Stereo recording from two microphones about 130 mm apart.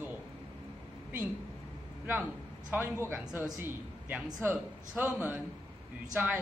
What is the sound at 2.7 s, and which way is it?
A man's voice, 20° right (ahead or behind).